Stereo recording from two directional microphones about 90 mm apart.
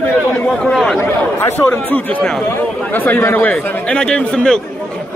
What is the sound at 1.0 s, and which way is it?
Speech, 30° left (ahead or behind).